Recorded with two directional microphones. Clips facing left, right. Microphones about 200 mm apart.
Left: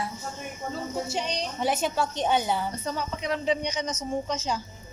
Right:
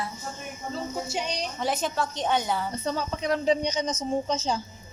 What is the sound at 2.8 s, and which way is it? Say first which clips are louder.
A woman's voice: right 2 dB; 30° right (ahead or behind).